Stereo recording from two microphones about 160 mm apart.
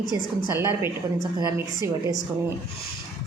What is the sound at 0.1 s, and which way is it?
A woman's voice, 15° right (ahead or behind).